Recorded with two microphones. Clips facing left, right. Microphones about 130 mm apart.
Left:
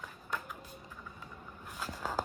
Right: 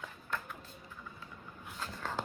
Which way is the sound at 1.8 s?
10° left (ahead or behind).